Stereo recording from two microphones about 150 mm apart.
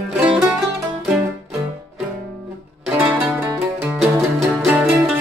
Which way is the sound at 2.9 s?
15° right (ahead or behind).